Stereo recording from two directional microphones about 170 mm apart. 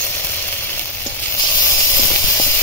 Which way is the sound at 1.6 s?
15° left (ahead or behind).